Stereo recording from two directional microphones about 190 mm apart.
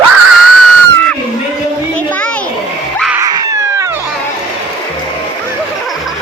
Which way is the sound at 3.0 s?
5° right (ahead or behind).